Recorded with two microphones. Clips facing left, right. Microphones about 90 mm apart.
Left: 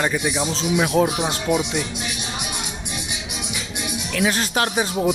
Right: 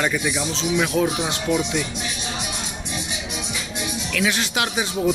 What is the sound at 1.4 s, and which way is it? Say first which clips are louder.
Speech: even; 15° left (ahead or behind).